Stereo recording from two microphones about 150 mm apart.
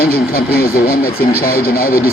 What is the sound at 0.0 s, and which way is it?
Speech, 90° left.